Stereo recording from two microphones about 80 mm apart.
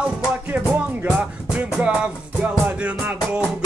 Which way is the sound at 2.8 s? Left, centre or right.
Centre.